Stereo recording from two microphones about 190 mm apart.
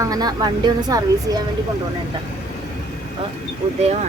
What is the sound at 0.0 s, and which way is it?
A woman's voice, 20° right (ahead or behind).